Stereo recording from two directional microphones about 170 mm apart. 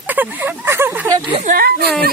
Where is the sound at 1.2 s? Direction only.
30° right (ahead or behind).